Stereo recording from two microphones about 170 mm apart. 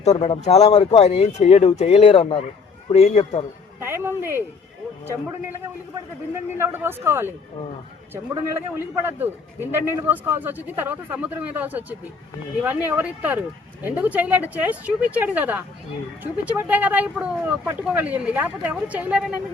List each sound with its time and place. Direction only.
0.0 s speech: 40° left (ahead or behind)
3.8 s speech: 15° right (ahead or behind)
5.9 s speech: 15° right (ahead or behind)
9.0 s speech: 15° right (ahead or behind)